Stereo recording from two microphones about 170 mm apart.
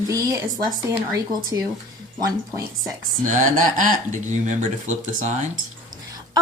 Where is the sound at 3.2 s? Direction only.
45° right (ahead or behind).